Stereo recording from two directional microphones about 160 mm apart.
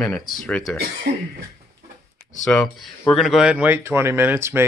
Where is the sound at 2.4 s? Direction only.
5° left (ahead or behind).